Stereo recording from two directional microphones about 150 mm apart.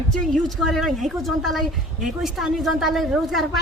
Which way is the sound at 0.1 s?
Centre (ahead or behind).